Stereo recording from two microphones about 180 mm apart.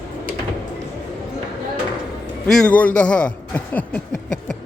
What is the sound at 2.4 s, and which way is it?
A man's voice, 5° left (ahead or behind).